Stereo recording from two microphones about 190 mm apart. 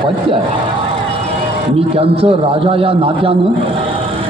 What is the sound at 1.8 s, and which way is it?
A man's voice, 30° right (ahead or behind).